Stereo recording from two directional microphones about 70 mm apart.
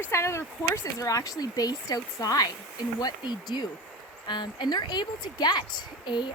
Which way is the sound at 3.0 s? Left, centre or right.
Left.